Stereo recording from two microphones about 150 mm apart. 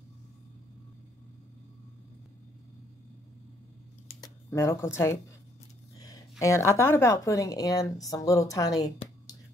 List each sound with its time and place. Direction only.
4.2 s speech: 20° left (ahead or behind)
5.9 s a sound: 25° left (ahead or behind)
6.4 s a woman's voice: 20° left (ahead or behind)